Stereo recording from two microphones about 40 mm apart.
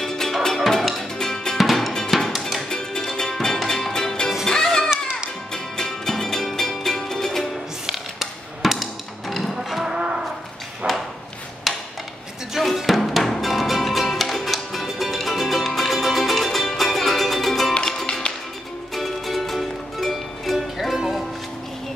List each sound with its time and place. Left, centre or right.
0.0 s music: centre
1.1 s drum: centre
1.6 s drum: centre
2.0 s music: centre
5.5 s music: centre
7.8 s a sound: centre
9.3 s music: centre
9.8 s cattle: centre
10.8 s a sound: right
11.7 s a sound: centre
12.5 s music: centre
18.9 s music: centre